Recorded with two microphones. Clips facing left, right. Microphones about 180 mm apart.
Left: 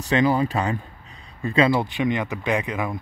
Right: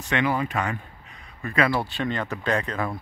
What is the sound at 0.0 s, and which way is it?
Speech, 35° left (ahead or behind).